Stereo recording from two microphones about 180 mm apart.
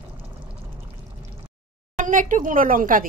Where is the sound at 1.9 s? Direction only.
45° right (ahead or behind).